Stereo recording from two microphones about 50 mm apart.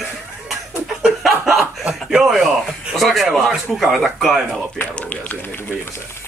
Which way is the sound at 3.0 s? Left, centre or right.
Centre.